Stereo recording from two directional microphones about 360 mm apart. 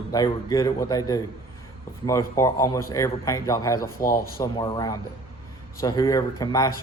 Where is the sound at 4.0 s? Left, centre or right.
Left.